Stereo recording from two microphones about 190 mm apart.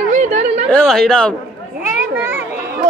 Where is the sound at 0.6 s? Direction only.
5° left (ahead or behind).